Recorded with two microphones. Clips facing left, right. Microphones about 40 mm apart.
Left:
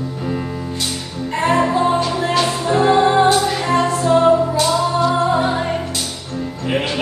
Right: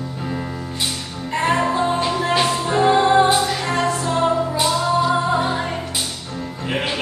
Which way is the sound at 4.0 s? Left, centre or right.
Centre.